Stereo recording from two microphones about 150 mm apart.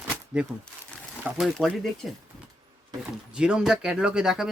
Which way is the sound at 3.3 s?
5° right (ahead or behind).